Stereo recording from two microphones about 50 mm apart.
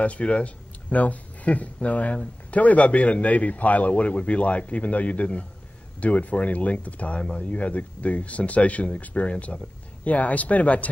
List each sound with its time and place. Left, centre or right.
0.0 s speech: left